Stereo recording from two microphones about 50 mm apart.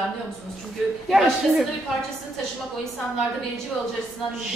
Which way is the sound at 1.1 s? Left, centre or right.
Centre.